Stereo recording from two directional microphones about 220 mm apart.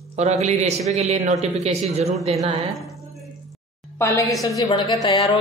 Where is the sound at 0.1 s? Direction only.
30° right (ahead or behind).